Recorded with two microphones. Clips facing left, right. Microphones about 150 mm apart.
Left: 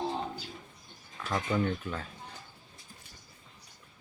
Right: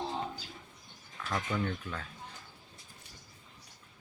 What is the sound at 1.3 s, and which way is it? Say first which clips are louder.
Speech: left 4 dB; 20° left (ahead or behind).